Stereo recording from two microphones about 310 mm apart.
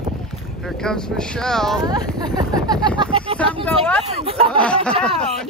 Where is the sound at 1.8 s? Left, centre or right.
Centre.